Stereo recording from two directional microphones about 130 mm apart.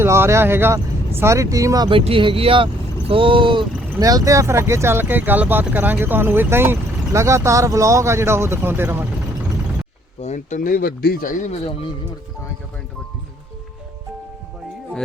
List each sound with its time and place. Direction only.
0.0 s speech: 20° right (ahead or behind)
1.9 s speech: 40° right (ahead or behind)
4.0 s speech: 25° right (ahead or behind)
10.2 s speech: 65° left (ahead or behind); by 11.5 s 90° left